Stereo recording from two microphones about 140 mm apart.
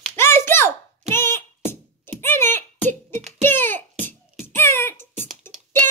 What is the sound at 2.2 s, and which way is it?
Clicking, 15° left (ahead or behind).